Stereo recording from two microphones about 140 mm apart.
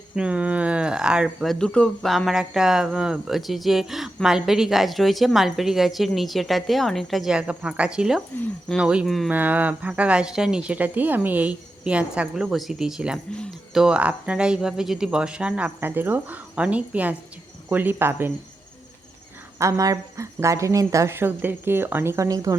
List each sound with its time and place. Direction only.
0.2 s speech: 10° right (ahead or behind)
9.3 s speech: 10° right (ahead or behind)
13.3 s speech: 5° left (ahead or behind)
13.8 s speech: 10° right (ahead or behind)
19.5 s speech: 20° right (ahead or behind)